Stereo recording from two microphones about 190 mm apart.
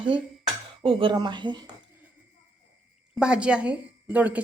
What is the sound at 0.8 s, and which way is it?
Speech, 25° right (ahead or behind).